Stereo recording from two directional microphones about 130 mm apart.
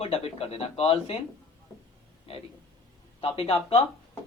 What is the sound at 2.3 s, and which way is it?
Speech, 45° left (ahead or behind).